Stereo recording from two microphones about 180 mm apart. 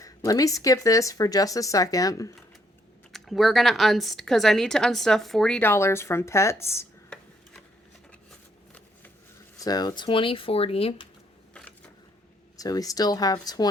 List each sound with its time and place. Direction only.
0.0 s speech: 20° left (ahead or behind)
3.1 s speech: centre (ahead or behind)
9.6 s speech: 20° left (ahead or behind)
12.5 s speech: 20° left (ahead or behind)